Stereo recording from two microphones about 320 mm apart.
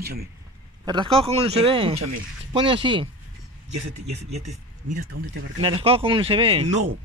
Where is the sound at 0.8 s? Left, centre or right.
Centre.